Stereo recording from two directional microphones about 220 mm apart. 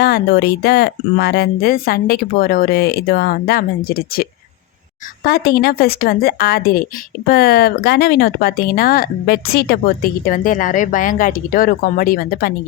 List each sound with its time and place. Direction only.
0.0 s speech: 45° left (ahead or behind)